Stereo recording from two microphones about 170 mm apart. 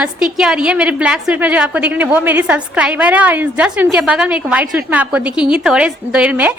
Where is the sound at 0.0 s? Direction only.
5° right (ahead or behind).